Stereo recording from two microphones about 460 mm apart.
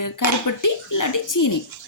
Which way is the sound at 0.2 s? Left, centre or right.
Left.